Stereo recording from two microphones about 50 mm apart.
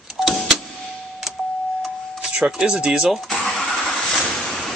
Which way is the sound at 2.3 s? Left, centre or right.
Centre.